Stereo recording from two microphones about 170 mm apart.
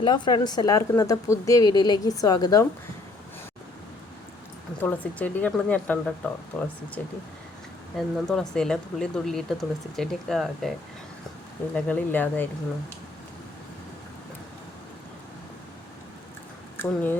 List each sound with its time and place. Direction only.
0.0 s speech: 30° left (ahead or behind)
4.8 s speech: 10° left (ahead or behind)
7.9 s speech: 5° left (ahead or behind)
16.7 s speech: 10° left (ahead or behind)